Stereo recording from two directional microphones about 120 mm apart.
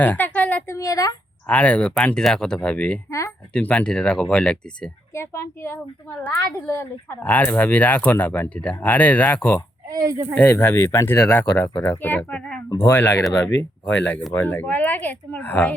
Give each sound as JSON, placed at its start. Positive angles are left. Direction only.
{"t": 0.0, "sound": "a sound", "side_deg": 15}
{"t": 0.8, "sound": "speech", "side_deg": 30}
{"t": 1.5, "sound": "speech", "side_deg": 10}
{"t": 3.1, "sound": "speech", "side_deg": 25}
{"t": 3.5, "sound": "speech", "side_deg": 10}
{"t": 5.1, "sound": "speech", "side_deg": 20}
{"t": 9.9, "sound": "speech", "side_deg": -30}
{"t": 10.3, "sound": "speech", "side_deg": 20}